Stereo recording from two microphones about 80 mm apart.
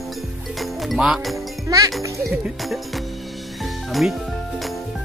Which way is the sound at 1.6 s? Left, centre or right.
Right.